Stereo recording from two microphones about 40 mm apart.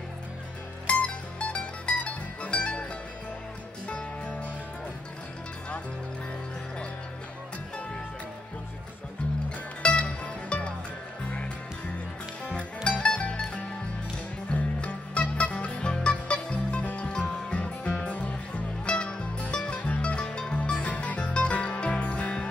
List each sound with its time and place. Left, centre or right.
0.8 s music: left
9.8 s music: left
14.5 s music: left
15.8 s music: left
20.7 s music: left